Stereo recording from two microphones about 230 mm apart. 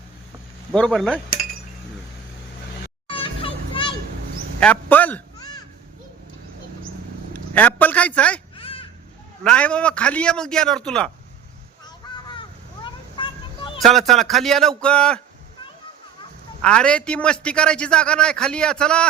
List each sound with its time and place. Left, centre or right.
0.7 s a man's voice: centre
3.1 s children playing: left
4.6 s a man's voice: centre
7.5 s a sound: centre
8.5 s a sound: left
9.4 s a man's voice: centre
12.3 s a sound: left
13.7 s a man's voice: centre
16.6 s a man's voice: centre